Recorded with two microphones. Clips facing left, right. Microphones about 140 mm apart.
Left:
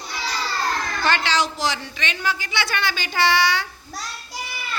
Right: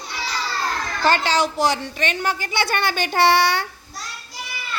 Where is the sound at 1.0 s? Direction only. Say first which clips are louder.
Right 4 dB; 45° right (ahead or behind); by 3.6 s 60° right (ahead or behind).